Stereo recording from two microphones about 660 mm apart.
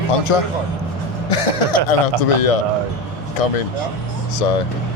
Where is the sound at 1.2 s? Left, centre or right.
Left.